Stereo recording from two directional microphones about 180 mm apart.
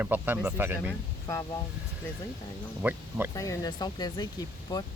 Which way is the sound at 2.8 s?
10° right (ahead or behind).